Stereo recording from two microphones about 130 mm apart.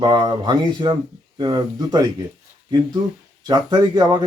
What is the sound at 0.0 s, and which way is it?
Speech, 35° right (ahead or behind).